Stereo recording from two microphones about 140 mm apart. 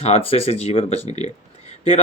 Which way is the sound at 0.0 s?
45° left (ahead or behind).